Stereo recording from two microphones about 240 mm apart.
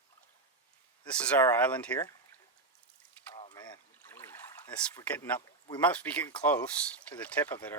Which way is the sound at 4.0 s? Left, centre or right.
Centre.